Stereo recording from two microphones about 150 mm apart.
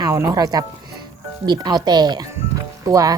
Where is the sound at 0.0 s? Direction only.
20° right (ahead or behind).